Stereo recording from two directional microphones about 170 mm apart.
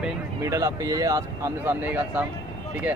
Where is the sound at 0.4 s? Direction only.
20° right (ahead or behind).